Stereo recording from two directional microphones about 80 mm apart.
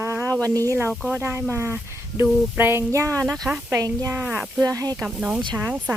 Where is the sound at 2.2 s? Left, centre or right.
Right.